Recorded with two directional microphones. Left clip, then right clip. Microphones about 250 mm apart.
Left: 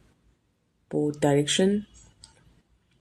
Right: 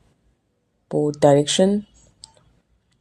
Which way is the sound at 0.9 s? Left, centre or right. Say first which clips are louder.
Right 8 dB; right.